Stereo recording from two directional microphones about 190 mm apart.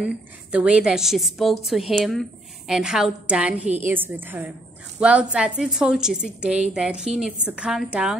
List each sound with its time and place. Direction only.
0.0 s a woman's voice: 5° right (ahead or behind)